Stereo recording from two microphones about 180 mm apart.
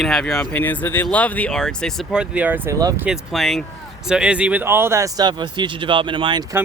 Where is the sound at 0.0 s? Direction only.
5° left (ahead or behind); by 3.1 s 15° right (ahead or behind).